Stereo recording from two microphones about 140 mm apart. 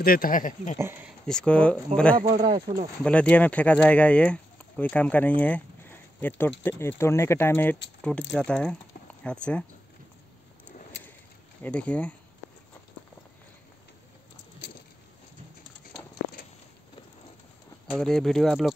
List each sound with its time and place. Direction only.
0.0 s speech: 90° left; by 0.7 s 70° left (ahead or behind)
1.2 s speech: 5° left (ahead or behind)
2.4 s speech: 30° right (ahead or behind)
3.0 s speech: 10° left (ahead or behind)
11.6 s speech: 10° left (ahead or behind)
17.9 s speech: 5° left (ahead or behind)